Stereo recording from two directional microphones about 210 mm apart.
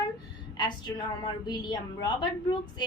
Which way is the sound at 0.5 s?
20° left (ahead or behind).